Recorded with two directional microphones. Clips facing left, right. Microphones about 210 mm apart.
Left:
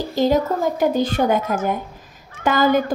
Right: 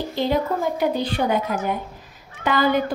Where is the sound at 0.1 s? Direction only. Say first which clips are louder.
Left 5 dB; 40° left (ahead or behind).